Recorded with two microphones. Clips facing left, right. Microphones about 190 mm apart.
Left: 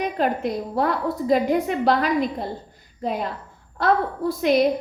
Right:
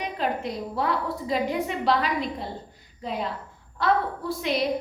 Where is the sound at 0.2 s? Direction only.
50° left (ahead or behind).